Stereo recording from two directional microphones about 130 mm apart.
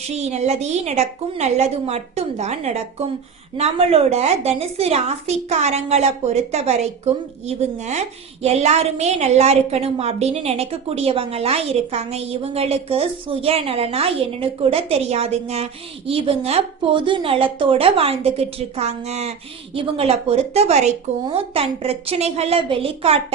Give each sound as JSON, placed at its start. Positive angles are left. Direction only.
{"t": 0.2, "sound": "a woman's voice", "side_deg": -60}
{"t": 19.7, "sound": "a woman's voice", "side_deg": -45}